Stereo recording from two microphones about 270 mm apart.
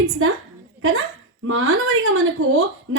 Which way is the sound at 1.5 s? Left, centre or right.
Right.